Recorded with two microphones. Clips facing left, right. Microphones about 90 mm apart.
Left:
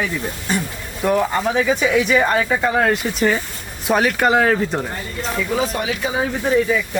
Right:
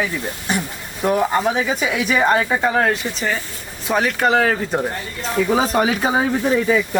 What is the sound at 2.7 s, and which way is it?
Speech, centre (ahead or behind).